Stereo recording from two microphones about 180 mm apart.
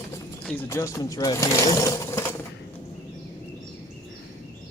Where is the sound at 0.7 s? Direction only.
15° left (ahead or behind).